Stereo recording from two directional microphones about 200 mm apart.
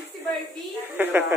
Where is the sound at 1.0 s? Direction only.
10° right (ahead or behind).